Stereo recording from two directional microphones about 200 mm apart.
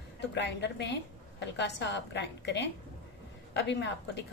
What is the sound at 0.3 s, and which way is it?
Speech, 60° left (ahead or behind).